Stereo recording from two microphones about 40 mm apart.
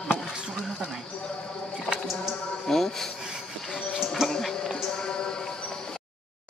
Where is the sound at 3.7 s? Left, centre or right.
Centre.